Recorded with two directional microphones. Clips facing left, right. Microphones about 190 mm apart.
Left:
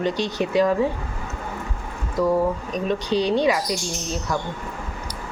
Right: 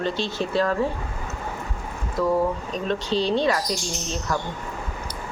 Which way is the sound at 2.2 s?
10° left (ahead or behind).